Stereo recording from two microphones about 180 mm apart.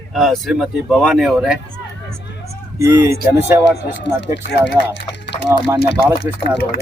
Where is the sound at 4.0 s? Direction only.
80° left.